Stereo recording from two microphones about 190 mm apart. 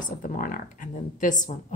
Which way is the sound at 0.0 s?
45° left (ahead or behind).